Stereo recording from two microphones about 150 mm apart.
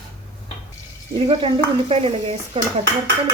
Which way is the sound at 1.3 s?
35° right (ahead or behind).